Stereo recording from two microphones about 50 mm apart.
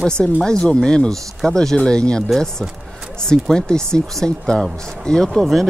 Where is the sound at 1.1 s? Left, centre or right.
Centre.